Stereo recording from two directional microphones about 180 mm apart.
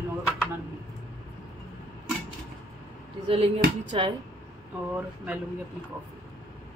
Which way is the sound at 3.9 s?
30° right (ahead or behind).